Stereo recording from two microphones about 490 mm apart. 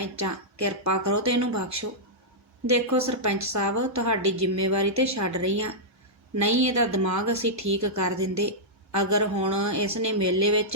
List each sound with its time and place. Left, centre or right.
0.0 s a woman's voice: right